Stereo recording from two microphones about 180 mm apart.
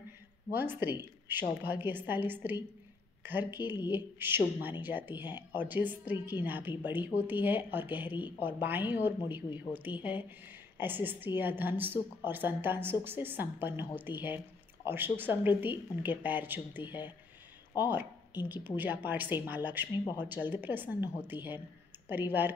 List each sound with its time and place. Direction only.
0.5 s a woman's voice: 10° right (ahead or behind)
5.1 s speech: 25° left (ahead or behind)
5.5 s a woman's voice: 10° right (ahead or behind)